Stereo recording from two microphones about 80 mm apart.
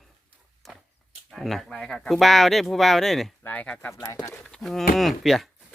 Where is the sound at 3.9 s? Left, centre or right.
Left.